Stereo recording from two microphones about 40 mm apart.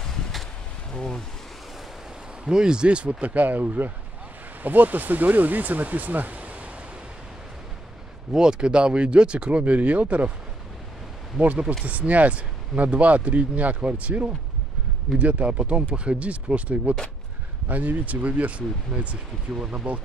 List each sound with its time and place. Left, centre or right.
0.0 s a sound: centre
0.9 s speech: centre
2.4 s speech: centre; by 6.7 s right
8.3 s speech: centre
9.8 s speech: right
11.8 s speech: right
19.6 s speech: right